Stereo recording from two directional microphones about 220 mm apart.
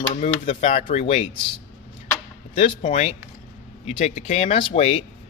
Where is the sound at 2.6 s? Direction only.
30° left (ahead or behind).